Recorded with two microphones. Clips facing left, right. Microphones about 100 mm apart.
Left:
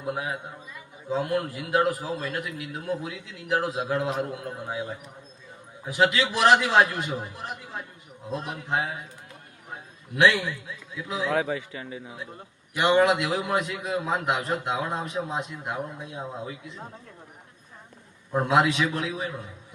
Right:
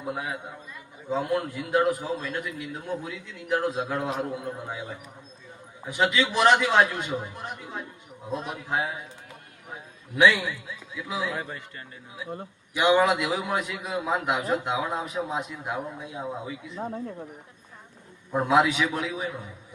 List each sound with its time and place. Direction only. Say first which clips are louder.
0.0 s a man's voice: left 1 dB; centre (ahead or behind)
5.8 s a man's voice: left 1 dB; centre (ahead or behind)
10.2 s a man's voice: even; centre (ahead or behind)
11.3 s speech: left 7 dB; 90° left
12.7 s a man's voice: even; centre (ahead or behind)
18.3 s a man's voice: even; centre (ahead or behind)